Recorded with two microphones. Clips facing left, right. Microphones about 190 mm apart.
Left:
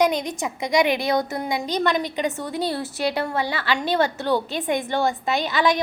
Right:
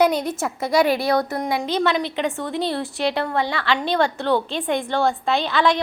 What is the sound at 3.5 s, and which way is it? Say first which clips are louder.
Speech: right 2 dB; 5° left (ahead or behind).